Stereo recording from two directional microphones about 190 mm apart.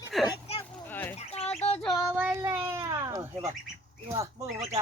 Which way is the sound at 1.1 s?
35° left (ahead or behind).